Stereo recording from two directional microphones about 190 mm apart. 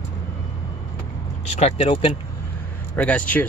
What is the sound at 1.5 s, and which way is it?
Speech, 35° left (ahead or behind).